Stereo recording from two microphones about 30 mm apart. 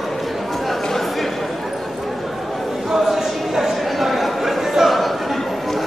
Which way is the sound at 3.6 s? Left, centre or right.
Centre.